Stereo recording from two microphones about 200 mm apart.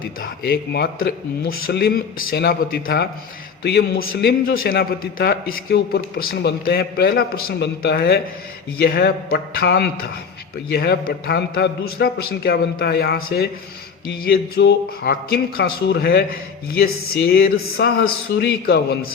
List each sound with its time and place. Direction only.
0.2 s a man's voice: 50° left (ahead or behind)